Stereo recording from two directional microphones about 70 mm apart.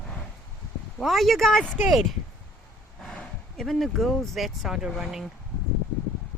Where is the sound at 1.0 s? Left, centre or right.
Centre.